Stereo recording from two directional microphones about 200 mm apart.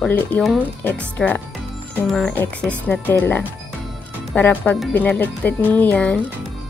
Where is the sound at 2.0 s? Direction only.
5° left (ahead or behind).